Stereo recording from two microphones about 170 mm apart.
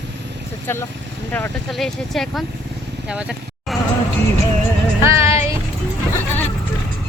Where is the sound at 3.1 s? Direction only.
5° right (ahead or behind).